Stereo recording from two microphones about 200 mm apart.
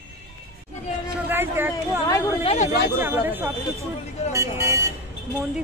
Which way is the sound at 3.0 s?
10° right (ahead or behind).